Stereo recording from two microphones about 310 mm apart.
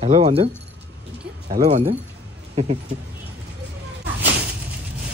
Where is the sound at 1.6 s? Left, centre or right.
Centre.